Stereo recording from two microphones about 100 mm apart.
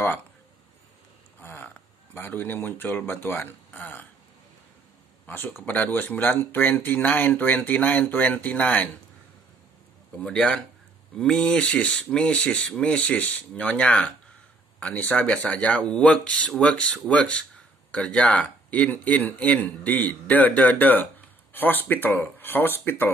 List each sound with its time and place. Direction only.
1.4 s speech: 20° left (ahead or behind)
5.2 s speech: 20° left (ahead or behind)
10.1 s speech: 10° left (ahead or behind)